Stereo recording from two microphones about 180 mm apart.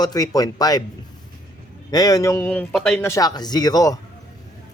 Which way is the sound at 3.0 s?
15° left (ahead or behind).